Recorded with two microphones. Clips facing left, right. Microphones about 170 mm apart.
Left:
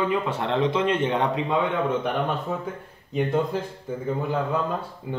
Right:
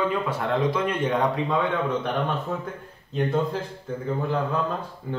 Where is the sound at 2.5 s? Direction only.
10° left (ahead or behind).